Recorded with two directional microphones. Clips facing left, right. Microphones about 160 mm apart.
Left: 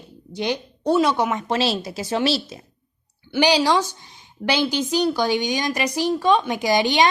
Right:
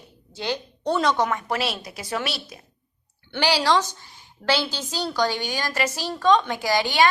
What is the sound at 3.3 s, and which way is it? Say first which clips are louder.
A woman's voice: left 3 dB; 15° left (ahead or behind).